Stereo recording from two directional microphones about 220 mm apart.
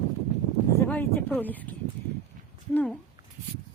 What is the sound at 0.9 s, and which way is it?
Speech, 10° left (ahead or behind).